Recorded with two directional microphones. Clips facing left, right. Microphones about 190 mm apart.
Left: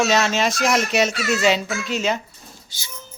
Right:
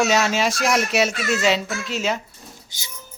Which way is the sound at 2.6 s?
20° right (ahead or behind).